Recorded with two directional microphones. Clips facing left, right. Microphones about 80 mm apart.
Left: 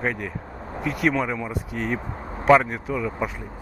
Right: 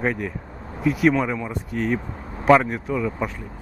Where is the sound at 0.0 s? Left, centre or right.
Centre.